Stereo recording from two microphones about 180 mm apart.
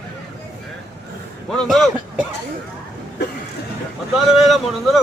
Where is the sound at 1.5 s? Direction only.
5° left (ahead or behind).